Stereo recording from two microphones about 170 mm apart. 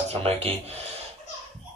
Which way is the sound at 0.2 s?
35° right (ahead or behind).